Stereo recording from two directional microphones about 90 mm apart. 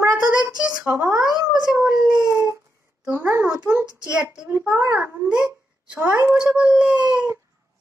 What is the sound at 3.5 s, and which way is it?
A child's voice, 10° right (ahead or behind).